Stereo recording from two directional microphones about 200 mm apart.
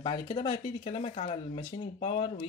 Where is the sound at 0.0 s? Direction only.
25° left (ahead or behind).